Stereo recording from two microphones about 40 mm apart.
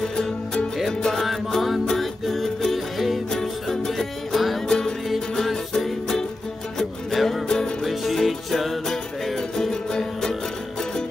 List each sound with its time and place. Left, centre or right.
1.1 s music: centre
3.3 s music: centre
4.6 s music: centre
7.4 s music: centre
7.8 s music: centre